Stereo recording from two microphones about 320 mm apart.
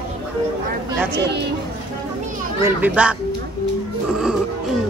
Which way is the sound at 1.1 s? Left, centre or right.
Right.